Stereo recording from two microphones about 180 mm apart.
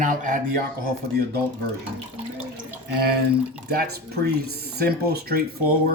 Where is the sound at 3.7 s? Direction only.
55° right (ahead or behind).